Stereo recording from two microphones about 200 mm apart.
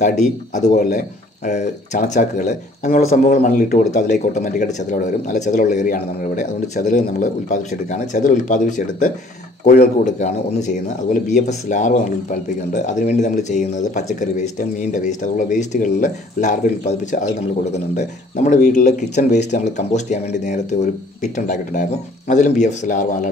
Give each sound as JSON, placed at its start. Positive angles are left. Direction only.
{"t": 0.6, "sound": "speech", "side_deg": 35}